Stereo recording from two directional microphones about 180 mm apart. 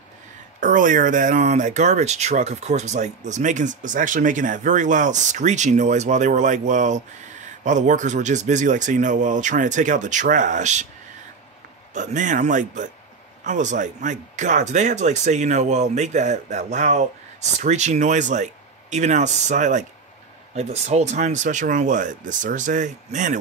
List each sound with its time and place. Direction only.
0.6 s speech: 45° right (ahead or behind)
11.9 s speech: 45° right (ahead or behind)